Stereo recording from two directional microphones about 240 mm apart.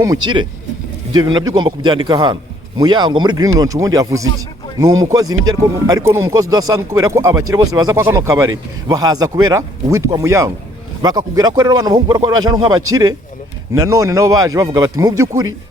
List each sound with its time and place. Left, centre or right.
0.0 s a man's voice: centre